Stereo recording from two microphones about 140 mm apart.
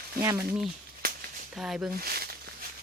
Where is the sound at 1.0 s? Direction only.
90° right.